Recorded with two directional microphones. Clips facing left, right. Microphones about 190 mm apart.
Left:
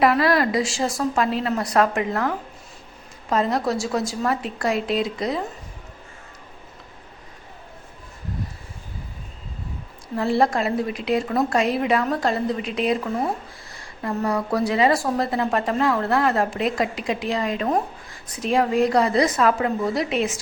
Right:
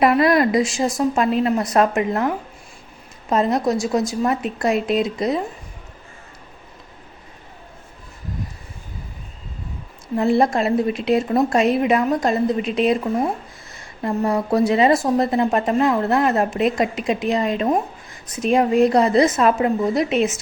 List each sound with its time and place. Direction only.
0.0 s speech: 20° right (ahead or behind)
10.2 s speech: 20° right (ahead or behind)